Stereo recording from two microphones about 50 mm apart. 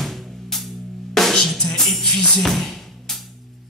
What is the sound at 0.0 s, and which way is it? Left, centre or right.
Music, centre.